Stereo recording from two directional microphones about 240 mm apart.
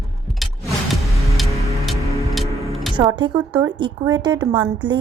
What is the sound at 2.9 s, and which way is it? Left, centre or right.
A woman's voice, centre.